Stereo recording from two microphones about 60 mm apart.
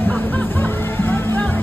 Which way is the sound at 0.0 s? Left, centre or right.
Left.